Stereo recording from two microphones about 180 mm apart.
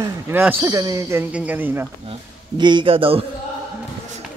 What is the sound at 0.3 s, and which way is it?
Speech, 10° right (ahead or behind).